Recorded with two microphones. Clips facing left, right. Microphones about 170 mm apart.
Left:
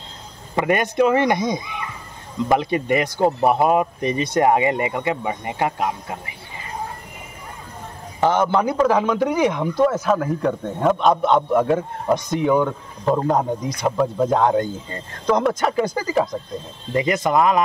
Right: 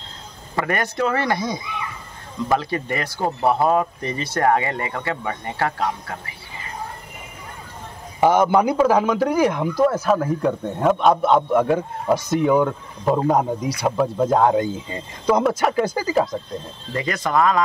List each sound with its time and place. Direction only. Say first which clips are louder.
0.6 s speech: left 4 dB; 20° left (ahead or behind)
8.2 s a man's voice: right 2 dB; 10° right (ahead or behind)
16.9 s speech: left 3 dB; 20° left (ahead or behind)